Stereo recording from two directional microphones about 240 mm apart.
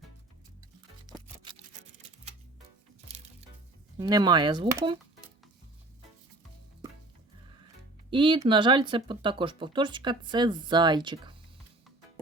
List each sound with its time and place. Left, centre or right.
3.9 s speech: centre
8.1 s speech: centre